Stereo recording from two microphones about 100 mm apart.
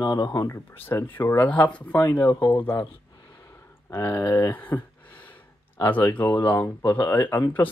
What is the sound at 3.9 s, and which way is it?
Speech, 25° left (ahead or behind).